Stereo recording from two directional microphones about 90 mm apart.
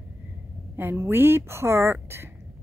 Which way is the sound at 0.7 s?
25° right (ahead or behind).